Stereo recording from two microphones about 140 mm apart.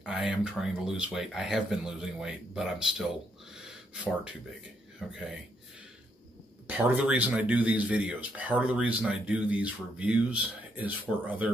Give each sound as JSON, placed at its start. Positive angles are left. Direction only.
{"t": 0.0, "sound": "speech", "side_deg": -5}
{"t": 6.7, "sound": "speech", "side_deg": -10}